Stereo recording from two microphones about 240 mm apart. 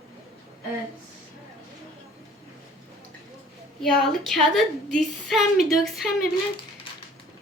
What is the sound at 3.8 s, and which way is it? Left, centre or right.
A woman's voice, centre.